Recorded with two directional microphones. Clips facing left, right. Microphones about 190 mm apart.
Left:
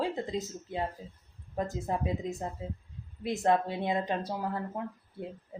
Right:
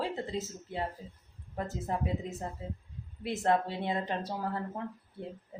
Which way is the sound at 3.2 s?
15° left (ahead or behind).